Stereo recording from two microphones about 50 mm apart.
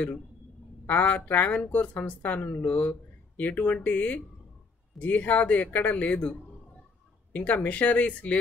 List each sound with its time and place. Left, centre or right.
0.8 s a woman's voice: left
7.3 s speech: left